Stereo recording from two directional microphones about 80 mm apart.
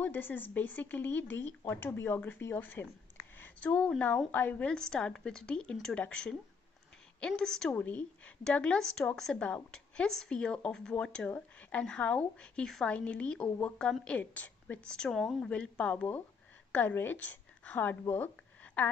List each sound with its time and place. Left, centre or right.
0.0 s speech: left
3.3 s a sound: left
4.3 s a woman's voice: left